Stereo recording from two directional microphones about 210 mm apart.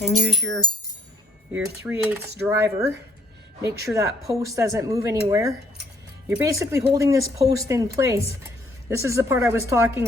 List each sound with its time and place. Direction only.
0.0 s speech: centre (ahead or behind)
3.9 s speech: 15° right (ahead or behind)